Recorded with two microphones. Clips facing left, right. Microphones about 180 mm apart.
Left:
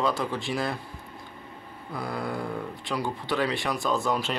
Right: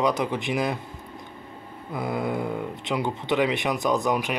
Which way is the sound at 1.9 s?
20° right (ahead or behind).